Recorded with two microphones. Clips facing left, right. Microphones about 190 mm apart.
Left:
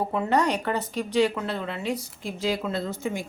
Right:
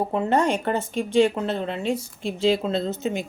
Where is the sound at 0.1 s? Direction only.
25° right (ahead or behind).